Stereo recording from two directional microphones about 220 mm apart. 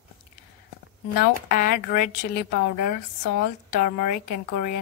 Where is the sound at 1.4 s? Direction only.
40° left (ahead or behind).